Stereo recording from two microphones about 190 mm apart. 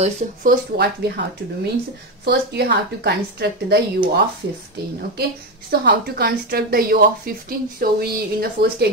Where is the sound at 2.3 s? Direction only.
60° right (ahead or behind).